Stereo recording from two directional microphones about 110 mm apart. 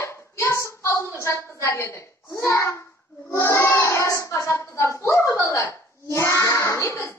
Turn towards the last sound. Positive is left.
turn(degrees=25)  # may be behind; listen again after turning